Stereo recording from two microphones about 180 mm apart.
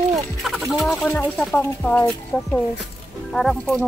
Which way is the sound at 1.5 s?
10° left (ahead or behind).